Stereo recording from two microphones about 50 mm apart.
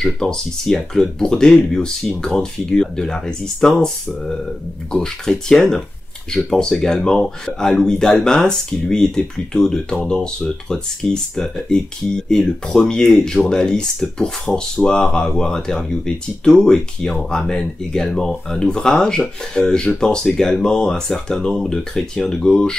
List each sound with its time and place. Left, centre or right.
0.0 s speech: centre